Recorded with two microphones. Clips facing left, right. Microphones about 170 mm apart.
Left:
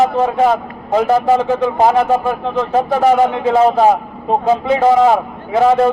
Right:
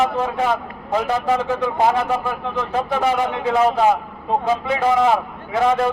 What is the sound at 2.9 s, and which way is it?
A man's voice, 40° left (ahead or behind).